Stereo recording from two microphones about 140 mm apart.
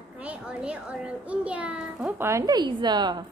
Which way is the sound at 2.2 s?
20° right (ahead or behind).